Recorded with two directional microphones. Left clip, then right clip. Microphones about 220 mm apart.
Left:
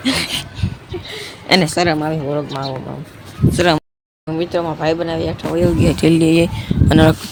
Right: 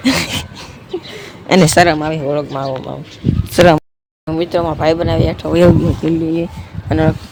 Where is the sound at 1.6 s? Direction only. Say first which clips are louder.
Right 7 dB; 45° right (ahead or behind).